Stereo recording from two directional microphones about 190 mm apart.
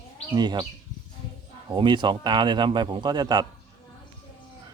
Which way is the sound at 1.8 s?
25° right (ahead or behind).